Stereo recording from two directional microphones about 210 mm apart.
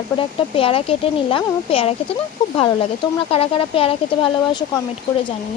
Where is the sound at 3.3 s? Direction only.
25° left (ahead or behind).